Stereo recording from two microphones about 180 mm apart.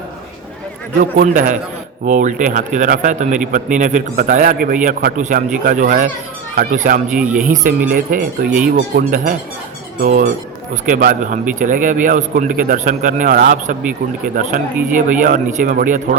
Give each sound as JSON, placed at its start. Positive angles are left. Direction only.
{"t": 0.9, "sound": "a man's voice", "side_deg": -50}
{"t": 7.1, "sound": "speech", "side_deg": -5}
{"t": 7.4, "sound": "a man's voice", "side_deg": -50}
{"t": 8.4, "sound": "speech", "side_deg": -5}
{"t": 8.7, "sound": "a man's voice", "side_deg": -50}